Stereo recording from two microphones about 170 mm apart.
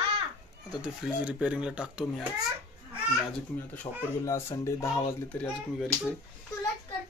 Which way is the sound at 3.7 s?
15° left (ahead or behind).